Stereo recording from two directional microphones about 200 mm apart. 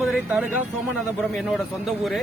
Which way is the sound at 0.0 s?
Centre (ahead or behind).